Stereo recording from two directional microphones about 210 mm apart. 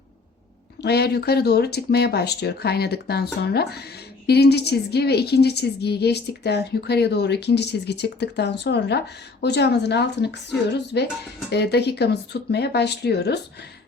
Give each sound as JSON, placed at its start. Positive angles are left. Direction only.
{"t": 0.8, "sound": "a woman's voice", "side_deg": 50}